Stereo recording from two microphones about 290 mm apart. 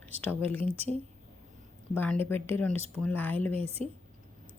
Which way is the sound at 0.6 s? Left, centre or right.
Centre.